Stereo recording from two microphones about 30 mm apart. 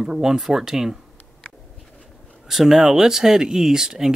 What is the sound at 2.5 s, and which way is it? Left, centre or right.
Speech, centre.